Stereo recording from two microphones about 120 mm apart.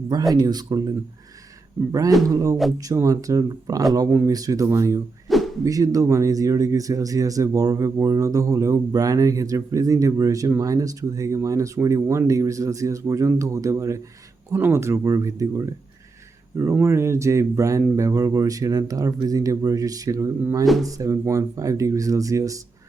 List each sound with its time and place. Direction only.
0.4 s speech: 35° right (ahead or behind)
5.3 s a sound: centre (ahead or behind)
5.6 s speech: 30° right (ahead or behind)
16.8 s speech: 20° right (ahead or behind)